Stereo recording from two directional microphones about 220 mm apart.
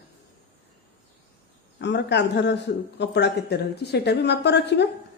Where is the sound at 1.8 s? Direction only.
50° left (ahead or behind).